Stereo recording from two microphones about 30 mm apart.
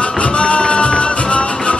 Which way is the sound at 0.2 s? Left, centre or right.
Left.